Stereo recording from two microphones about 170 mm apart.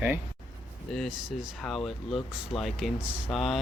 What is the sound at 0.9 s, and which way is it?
Speech, centre (ahead or behind).